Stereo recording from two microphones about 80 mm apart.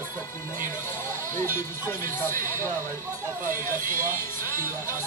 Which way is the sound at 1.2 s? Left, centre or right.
Left.